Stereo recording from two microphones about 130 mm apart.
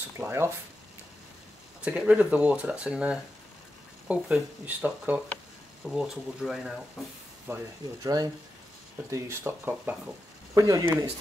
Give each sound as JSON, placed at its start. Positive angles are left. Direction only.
{"t": 0.2, "sound": "speech", "side_deg": -20}
{"t": 1.9, "sound": "speech", "side_deg": -10}
{"t": 7.5, "sound": "speech", "side_deg": -20}